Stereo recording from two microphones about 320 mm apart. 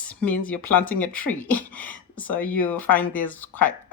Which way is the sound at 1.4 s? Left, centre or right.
Centre.